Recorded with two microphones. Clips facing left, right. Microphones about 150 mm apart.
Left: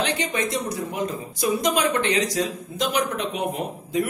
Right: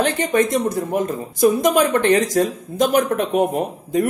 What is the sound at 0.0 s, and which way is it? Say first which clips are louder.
Speech: right 7 dB; 45° right (ahead or behind).